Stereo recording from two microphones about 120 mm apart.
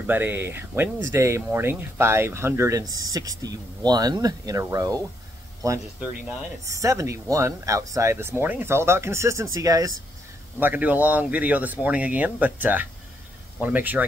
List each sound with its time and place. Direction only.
0.0 s speech: 15° right (ahead or behind)
6.6 s speech: 25° right (ahead or behind)
10.6 s speech: 15° right (ahead or behind)